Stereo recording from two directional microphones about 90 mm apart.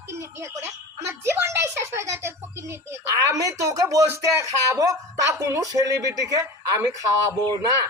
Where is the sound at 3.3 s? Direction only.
35° right (ahead or behind).